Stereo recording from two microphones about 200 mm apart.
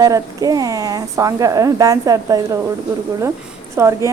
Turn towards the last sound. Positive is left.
turn(degrees=-15)  # may be behind; listen again after turning